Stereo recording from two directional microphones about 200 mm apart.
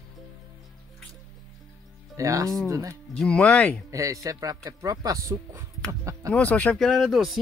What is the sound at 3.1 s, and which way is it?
Speech, 5° left (ahead or behind).